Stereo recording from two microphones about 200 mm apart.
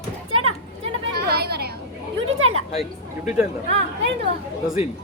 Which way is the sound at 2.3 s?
90° right.